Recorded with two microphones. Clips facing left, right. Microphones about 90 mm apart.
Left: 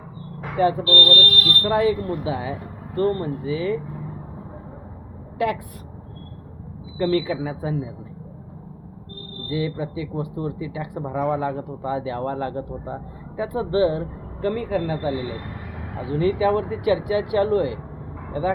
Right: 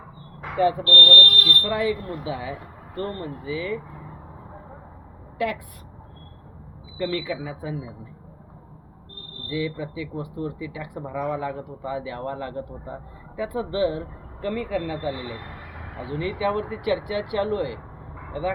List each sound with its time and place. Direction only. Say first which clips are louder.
0.5 s speech: left 1 dB; 25° left (ahead or behind)
5.4 s speech: left 3 dB; 25° left (ahead or behind)
7.0 s speech: left 6 dB; 40° left (ahead or behind)
9.5 s speech: left 2 dB; 35° left (ahead or behind)
16.0 s speech: left 5 dB; 25° left (ahead or behind)
16.2 s speech: left 6 dB; 35° left (ahead or behind)
16.8 s speech: left 4 dB; 25° left (ahead or behind)